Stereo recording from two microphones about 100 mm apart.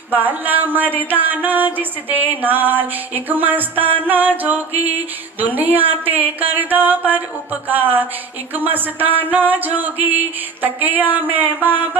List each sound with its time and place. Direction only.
0.1 s music: 20° right (ahead or behind)
5.9 s speech: 15° right (ahead or behind)
8.5 s music: 20° right (ahead or behind)
10.6 s speech: 20° right (ahead or behind)